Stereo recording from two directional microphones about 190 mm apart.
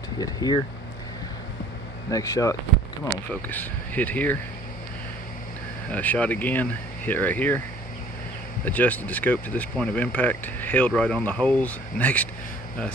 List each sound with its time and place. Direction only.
0.2 s speech: 20° left (ahead or behind)
2.0 s speech: 15° left (ahead or behind)
5.9 s speech: 5° left (ahead or behind)
8.6 s speech: 10° left (ahead or behind)